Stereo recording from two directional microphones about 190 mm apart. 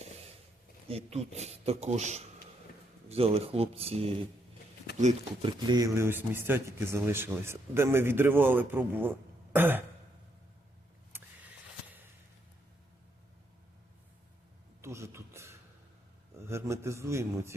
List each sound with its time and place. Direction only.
0.9 s speech: 30° right (ahead or behind)
5.5 s speech: 20° right (ahead or behind)
14.8 s a sound: 15° right (ahead or behind)